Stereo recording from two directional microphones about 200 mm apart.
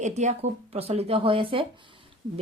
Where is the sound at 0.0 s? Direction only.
35° right (ahead or behind).